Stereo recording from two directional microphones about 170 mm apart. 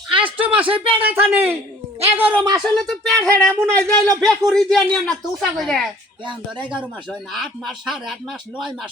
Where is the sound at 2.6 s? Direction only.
5° left (ahead or behind).